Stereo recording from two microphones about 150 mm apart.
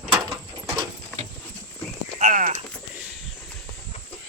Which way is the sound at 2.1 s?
60° right (ahead or behind).